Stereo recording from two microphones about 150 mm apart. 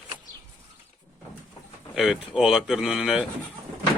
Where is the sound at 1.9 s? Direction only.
5° right (ahead or behind).